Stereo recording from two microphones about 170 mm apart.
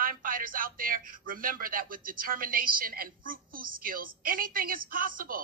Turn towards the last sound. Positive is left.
turn(degrees=-55)  # may be behind; listen again after turning